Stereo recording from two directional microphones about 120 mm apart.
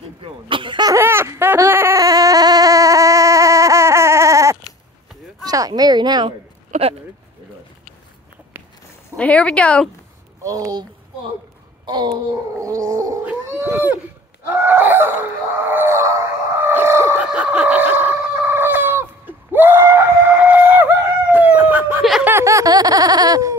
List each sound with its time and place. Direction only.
0.2 s cough: 45° right (ahead or behind)
0.9 s a sound: 20° right (ahead or behind); by 6.3 s 35° right (ahead or behind)
6.7 s speech: 55° right (ahead or behind)
9.1 s speech: 10° left (ahead or behind)
10.4 s speech: 30° right (ahead or behind)
11.8 s a sound: 40° right (ahead or behind)
12.5 s gargling: 25° right (ahead or behind)
13.3 s dog: 15° right (ahead or behind)
14.7 s a sound: 20° right (ahead or behind)
17.3 s chicken: 10° right (ahead or behind)
22.2 s laughter: 25° right (ahead or behind)